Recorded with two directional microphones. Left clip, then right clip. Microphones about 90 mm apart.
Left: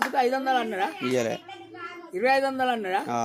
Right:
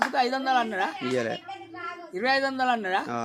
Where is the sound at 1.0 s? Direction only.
10° left (ahead or behind).